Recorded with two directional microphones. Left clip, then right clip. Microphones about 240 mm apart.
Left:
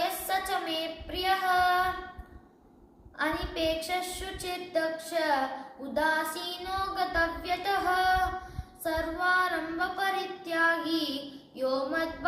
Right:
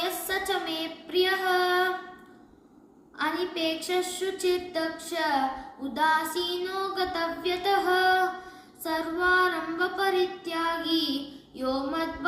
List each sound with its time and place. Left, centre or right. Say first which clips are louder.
0.0 s child singing: even; centre
3.2 s child singing: right 2 dB; centre